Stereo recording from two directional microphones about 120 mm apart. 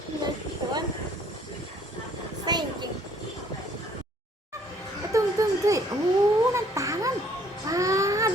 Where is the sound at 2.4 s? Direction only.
35° right (ahead or behind).